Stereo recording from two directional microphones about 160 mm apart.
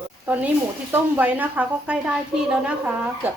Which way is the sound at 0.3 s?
10° right (ahead or behind).